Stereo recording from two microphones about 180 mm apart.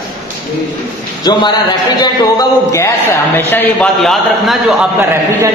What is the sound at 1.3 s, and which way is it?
A man's voice, 25° left (ahead or behind).